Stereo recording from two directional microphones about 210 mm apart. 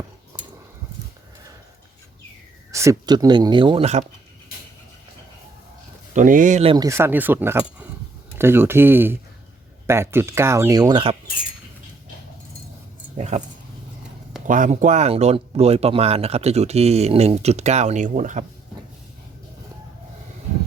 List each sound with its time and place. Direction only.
0.3 s a sound: 15° right (ahead or behind)
2.7 s speech: 15° right (ahead or behind)
6.1 s speech: 40° right (ahead or behind)
6.7 s speech: 15° right (ahead or behind)
13.1 s speech: 35° right (ahead or behind)
14.4 s speech: 40° right (ahead or behind)